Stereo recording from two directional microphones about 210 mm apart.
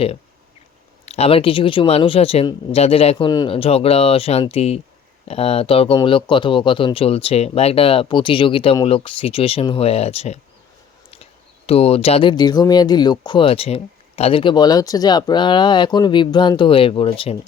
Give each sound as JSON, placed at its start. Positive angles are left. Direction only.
{"t": 1.0, "sound": "speech", "side_deg": 30}